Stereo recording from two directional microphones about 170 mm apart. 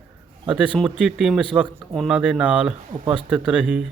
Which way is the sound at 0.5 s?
5° right (ahead or behind).